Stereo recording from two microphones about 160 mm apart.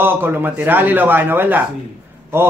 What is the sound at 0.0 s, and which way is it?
Speech, 15° right (ahead or behind).